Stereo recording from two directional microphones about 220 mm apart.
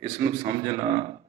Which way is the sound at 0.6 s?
20° right (ahead or behind).